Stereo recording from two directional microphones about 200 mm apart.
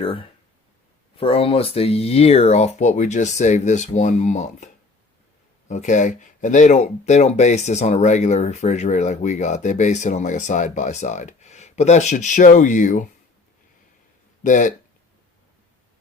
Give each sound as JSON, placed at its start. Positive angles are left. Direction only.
{"t": 0.0, "sound": "speech", "side_deg": 25}
{"t": 14.4, "sound": "speech", "side_deg": 40}